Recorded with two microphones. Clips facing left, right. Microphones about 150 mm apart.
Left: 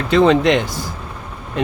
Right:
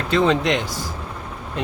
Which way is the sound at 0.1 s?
70° left (ahead or behind).